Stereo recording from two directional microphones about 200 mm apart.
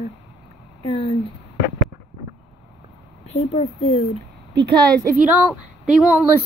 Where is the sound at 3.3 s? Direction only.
35° left (ahead or behind).